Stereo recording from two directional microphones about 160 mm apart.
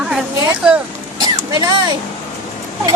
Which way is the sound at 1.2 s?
25° right (ahead or behind).